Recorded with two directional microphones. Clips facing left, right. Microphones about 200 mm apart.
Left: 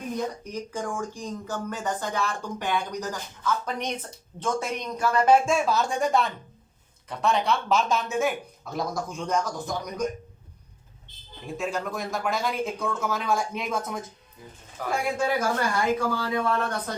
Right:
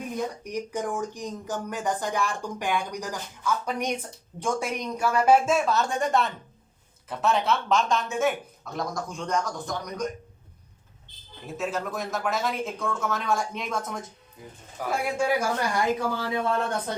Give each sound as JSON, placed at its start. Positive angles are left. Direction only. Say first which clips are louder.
{"t": 0.4, "sound": "speech", "louder": "right 2 dB", "side_deg": -15}
{"t": 11.4, "sound": "speech", "louder": "even", "side_deg": 0}
{"t": 16.0, "sound": "speech", "louder": "left 1 dB", "side_deg": -20}